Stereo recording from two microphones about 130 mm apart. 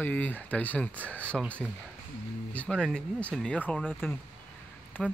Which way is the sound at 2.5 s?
10° left (ahead or behind).